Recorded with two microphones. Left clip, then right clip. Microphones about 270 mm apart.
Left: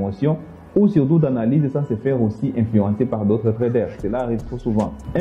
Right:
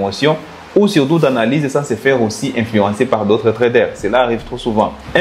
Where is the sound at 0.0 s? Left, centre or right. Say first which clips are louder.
Right 8 dB; centre.